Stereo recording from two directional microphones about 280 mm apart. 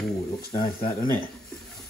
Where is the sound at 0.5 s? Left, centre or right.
Left.